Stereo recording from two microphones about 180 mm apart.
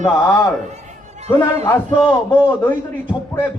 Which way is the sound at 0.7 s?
40° right (ahead or behind).